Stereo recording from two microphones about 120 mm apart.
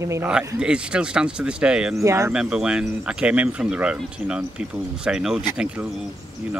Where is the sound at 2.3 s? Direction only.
5° right (ahead or behind).